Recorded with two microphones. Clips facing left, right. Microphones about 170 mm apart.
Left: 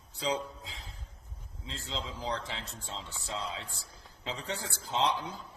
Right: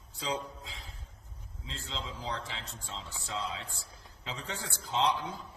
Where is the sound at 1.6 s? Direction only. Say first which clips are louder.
Left 2 dB; 30° left (ahead or behind).